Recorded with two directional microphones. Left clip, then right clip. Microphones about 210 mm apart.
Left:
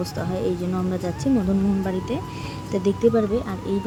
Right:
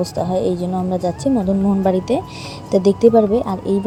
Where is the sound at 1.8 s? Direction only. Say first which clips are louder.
Right 10 dB; 25° right (ahead or behind).